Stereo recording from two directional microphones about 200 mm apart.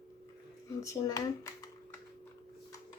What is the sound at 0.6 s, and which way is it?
Speech, 15° left (ahead or behind).